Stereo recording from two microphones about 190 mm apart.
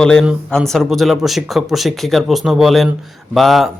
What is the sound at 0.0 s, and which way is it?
Speech, 5° left (ahead or behind).